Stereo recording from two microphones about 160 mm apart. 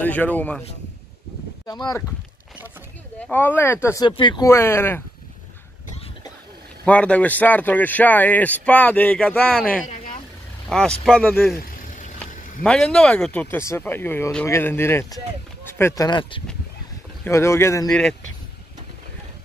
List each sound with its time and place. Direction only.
0.0 s speech: 10° left (ahead or behind)
1.7 s speech: 25° left (ahead or behind)
3.2 s speech: 10° left (ahead or behind)
4.0 s speech: 25° left (ahead or behind)
4.5 s speech: 15° left (ahead or behind)
6.8 s speech: 10° left (ahead or behind)
10.7 s speech: 5° left (ahead or behind)
11.8 s vehicle: 55° left (ahead or behind)
12.6 s speech: 5° left (ahead or behind); by 16.4 s 30° left (ahead or behind)
17.2 s speech: 15° left (ahead or behind)
17.8 s speech: 5° left (ahead or behind)